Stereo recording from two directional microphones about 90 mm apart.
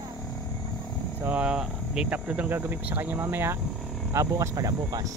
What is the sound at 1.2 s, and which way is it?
Speech, 15° right (ahead or behind).